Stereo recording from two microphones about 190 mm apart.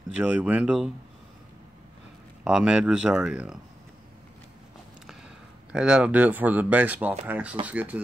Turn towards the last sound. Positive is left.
turn(degrees=-10)  # may be behind; listen again after turning